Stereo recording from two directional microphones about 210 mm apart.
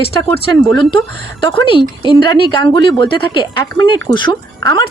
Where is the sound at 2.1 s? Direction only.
20° left (ahead or behind).